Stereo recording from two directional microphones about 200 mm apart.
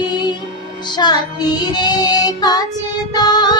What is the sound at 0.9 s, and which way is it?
Child singing, 20° left (ahead or behind).